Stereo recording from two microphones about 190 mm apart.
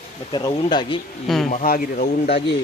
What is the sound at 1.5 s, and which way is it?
Speech, 45° left (ahead or behind).